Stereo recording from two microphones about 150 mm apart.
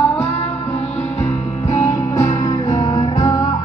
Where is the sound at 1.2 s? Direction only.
50° left (ahead or behind).